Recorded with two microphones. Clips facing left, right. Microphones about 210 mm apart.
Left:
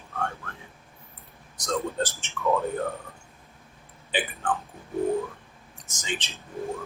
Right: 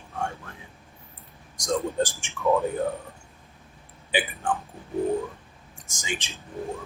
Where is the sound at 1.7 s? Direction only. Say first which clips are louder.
Right 3 dB; 15° right (ahead or behind).